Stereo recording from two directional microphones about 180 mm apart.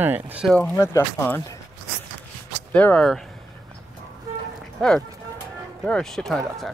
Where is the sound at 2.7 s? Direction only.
5° left (ahead or behind).